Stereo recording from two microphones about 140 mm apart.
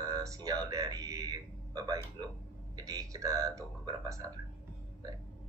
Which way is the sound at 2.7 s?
25° right (ahead or behind).